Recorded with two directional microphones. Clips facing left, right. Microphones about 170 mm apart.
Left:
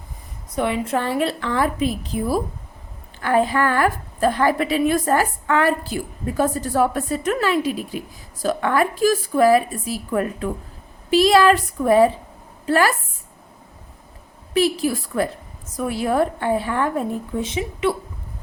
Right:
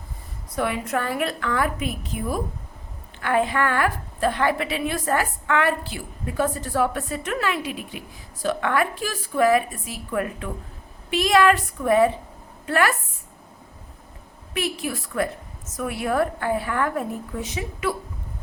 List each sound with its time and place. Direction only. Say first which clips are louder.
0.5 s a woman's voice: left 3 dB; 25° left (ahead or behind)
14.5 s a woman's voice: left 8 dB; 35° left (ahead or behind)